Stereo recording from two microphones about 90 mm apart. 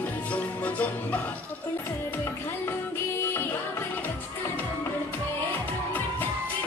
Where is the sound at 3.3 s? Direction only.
25° left (ahead or behind).